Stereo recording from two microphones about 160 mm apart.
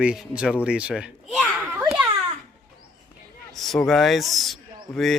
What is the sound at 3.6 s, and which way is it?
Speech, centre (ahead or behind).